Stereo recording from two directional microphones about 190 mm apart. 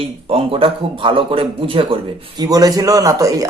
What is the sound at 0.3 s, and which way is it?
Speech, 30° right (ahead or behind).